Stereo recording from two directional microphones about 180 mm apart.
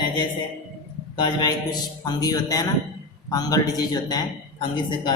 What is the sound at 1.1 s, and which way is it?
A man's voice, 25° left (ahead or behind).